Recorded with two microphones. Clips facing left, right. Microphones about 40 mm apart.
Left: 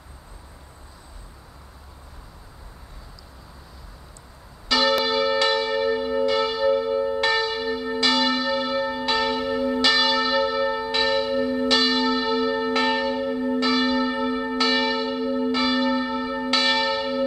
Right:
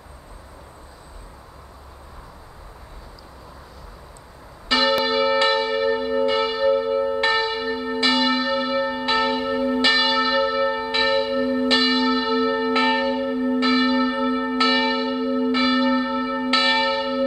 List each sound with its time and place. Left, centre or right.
4.6 s church bell: right